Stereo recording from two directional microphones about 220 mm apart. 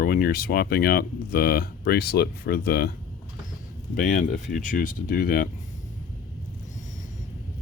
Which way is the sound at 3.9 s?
35° left (ahead or behind).